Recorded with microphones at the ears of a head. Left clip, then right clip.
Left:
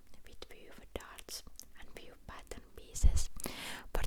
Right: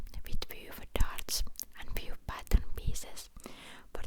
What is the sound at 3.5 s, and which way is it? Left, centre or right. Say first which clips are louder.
Whispering: left 6 dB; left.